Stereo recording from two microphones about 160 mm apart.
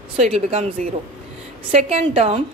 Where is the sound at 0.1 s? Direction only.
40° right (ahead or behind).